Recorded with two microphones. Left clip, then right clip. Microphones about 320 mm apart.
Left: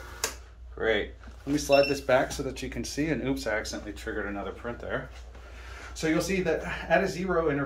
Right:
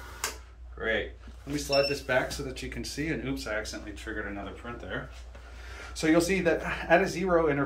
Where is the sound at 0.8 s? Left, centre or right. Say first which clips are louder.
Left 4 dB; centre.